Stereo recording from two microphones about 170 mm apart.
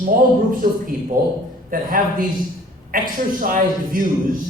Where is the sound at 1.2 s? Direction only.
55° right (ahead or behind).